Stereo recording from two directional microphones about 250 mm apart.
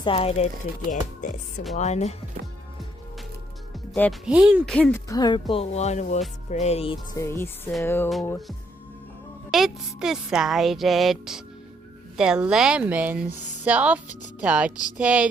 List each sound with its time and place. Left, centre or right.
0.0 s speech: left
4.3 s speech: centre